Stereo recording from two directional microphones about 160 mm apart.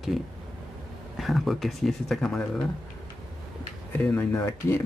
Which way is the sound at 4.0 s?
10° left (ahead or behind).